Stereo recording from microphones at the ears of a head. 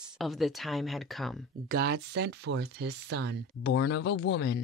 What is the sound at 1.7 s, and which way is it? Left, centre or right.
Speech, right.